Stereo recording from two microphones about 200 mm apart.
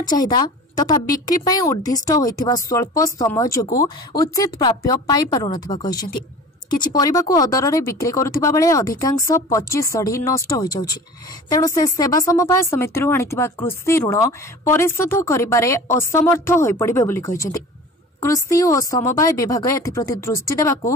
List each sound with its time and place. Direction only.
0.0 s a woman's voice: 20° left (ahead or behind)